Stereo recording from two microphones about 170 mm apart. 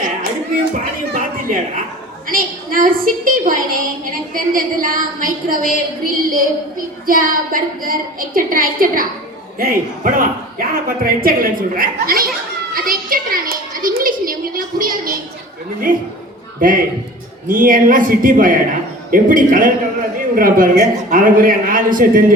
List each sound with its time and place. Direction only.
1.1 s a woman's voice: 50° right (ahead or behind)